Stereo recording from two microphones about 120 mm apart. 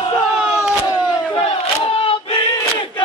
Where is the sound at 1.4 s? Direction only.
50° left (ahead or behind).